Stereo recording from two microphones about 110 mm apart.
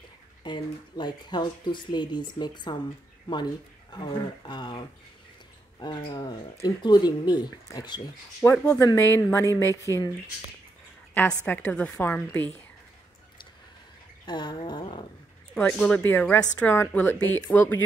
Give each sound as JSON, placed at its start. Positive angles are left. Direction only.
{"t": 0.4, "sound": "speech", "side_deg": 45}
{"t": 3.9, "sound": "speech", "side_deg": 40}
{"t": 8.4, "sound": "speech", "side_deg": 25}
{"t": 11.4, "sound": "a woman's voice", "side_deg": 15}
{"t": 14.2, "sound": "speech", "side_deg": 45}
{"t": 15.5, "sound": "a woman's voice", "side_deg": 10}